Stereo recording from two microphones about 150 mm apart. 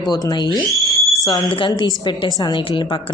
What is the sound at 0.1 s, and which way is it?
Speech, 25° left (ahead or behind).